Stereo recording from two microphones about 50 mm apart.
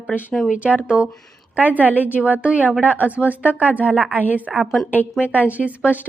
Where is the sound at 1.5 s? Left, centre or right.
Right.